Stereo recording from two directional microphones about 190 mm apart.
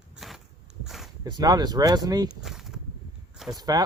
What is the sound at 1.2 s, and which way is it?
Speech, 20° right (ahead or behind).